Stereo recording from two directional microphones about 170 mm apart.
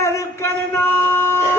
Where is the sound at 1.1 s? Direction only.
15° left (ahead or behind).